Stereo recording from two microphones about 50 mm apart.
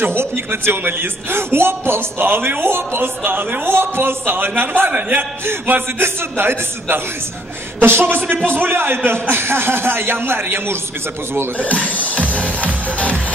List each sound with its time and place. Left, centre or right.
0.5 s a man's voice: right
11.5 s music: left